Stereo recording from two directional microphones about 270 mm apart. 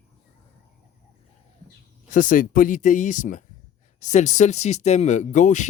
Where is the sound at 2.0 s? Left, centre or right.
Left.